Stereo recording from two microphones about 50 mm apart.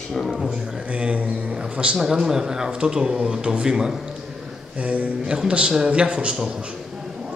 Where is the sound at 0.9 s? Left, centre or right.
Right.